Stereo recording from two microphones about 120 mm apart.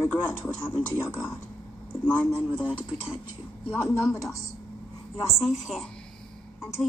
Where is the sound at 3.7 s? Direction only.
15° left (ahead or behind).